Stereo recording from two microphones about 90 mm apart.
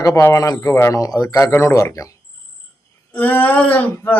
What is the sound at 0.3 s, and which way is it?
A man's voice, 45° left (ahead or behind).